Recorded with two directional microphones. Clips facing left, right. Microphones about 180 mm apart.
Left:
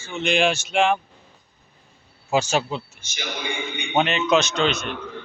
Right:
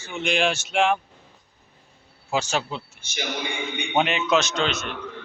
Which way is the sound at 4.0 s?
10° right (ahead or behind).